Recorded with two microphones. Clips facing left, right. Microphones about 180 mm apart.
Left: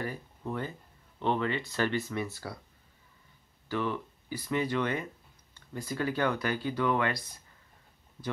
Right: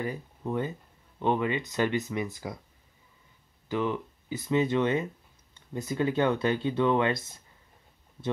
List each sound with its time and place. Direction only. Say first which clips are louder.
0.0 s speech: right 3 dB; 15° right (ahead or behind)
3.6 s speech: right 3 dB; 20° right (ahead or behind)